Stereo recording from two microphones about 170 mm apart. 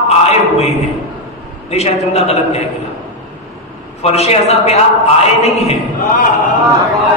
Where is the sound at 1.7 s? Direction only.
40° left (ahead or behind).